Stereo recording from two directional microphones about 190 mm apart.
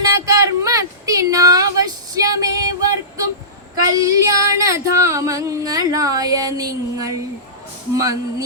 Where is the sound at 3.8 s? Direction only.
15° right (ahead or behind).